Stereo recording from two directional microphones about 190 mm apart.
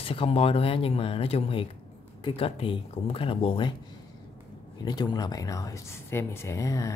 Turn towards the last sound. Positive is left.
turn(degrees=15)  # may be behind; listen again after turning